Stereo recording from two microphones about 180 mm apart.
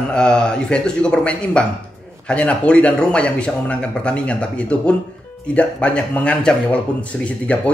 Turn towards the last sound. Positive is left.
turn(degrees=5)  # may be behind; listen again after turning